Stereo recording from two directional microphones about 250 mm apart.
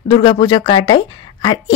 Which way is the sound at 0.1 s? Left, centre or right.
Centre.